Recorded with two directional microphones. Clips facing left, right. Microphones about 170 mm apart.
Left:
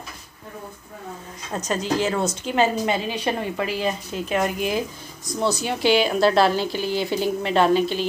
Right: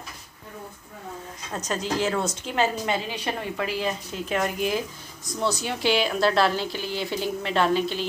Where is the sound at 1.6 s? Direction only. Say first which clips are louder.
Left 3 dB; centre (ahead or behind).